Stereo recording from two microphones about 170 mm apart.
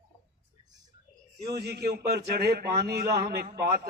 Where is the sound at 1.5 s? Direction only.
70° right (ahead or behind).